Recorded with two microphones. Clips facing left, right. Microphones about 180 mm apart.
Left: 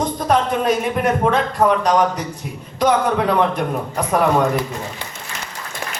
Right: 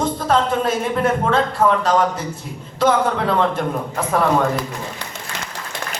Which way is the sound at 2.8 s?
15° left (ahead or behind).